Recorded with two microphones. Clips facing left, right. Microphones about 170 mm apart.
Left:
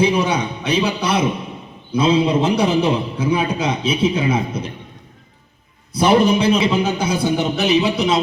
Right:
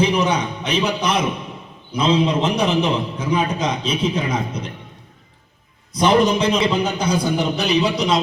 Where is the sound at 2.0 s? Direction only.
10° left (ahead or behind).